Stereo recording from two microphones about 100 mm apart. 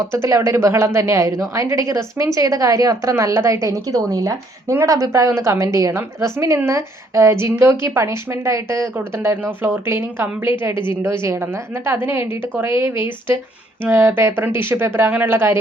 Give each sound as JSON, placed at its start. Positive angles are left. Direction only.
{"t": 0.0, "sound": "a woman's voice", "side_deg": -25}